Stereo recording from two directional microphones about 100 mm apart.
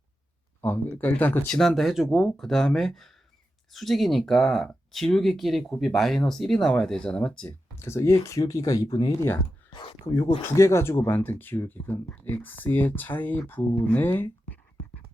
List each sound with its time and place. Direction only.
0.6 s speech: 20° left (ahead or behind)
1.5 s speech: centre (ahead or behind)
7.8 s speech: 25° left (ahead or behind)
9.7 s speech: 60° left (ahead or behind)
10.6 s speech: 30° left (ahead or behind)